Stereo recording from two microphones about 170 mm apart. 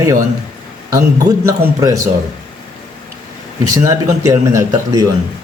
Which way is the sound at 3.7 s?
20° right (ahead or behind).